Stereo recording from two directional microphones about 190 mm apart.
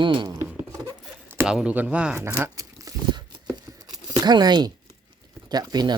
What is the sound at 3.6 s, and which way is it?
Tearing, 20° right (ahead or behind).